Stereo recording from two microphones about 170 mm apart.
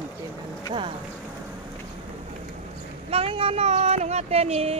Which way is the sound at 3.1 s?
35° right (ahead or behind).